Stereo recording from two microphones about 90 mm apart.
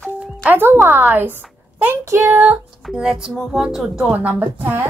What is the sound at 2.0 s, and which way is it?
Speech, 35° right (ahead or behind).